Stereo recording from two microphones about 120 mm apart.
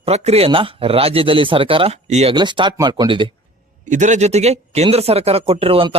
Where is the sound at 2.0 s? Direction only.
65° right (ahead or behind).